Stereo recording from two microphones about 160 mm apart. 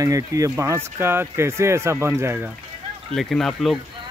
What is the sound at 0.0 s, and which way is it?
Speech, 20° right (ahead or behind).